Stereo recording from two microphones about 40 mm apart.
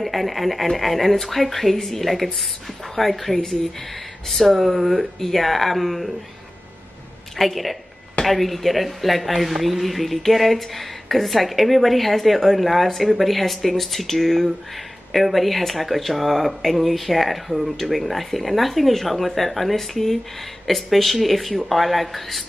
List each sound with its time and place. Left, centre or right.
0.0 s speech: centre
7.3 s speech: centre